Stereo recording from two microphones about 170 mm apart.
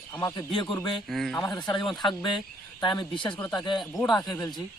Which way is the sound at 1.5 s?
25° left (ahead or behind).